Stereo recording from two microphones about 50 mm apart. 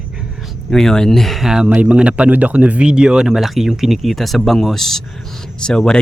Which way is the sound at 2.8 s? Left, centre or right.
Centre.